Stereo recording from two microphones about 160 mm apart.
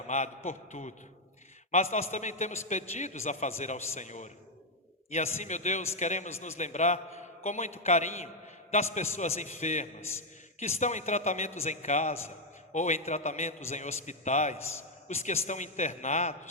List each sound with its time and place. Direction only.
0.1 s a man's voice: 45° left (ahead or behind)